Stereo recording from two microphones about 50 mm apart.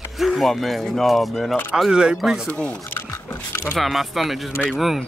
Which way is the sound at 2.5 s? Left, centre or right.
Left.